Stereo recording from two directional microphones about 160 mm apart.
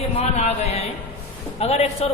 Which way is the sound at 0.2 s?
40° left (ahead or behind).